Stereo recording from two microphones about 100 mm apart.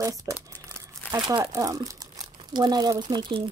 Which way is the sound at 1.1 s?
45° right (ahead or behind).